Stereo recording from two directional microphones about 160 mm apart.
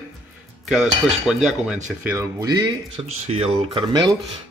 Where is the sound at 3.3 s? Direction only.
40° right (ahead or behind).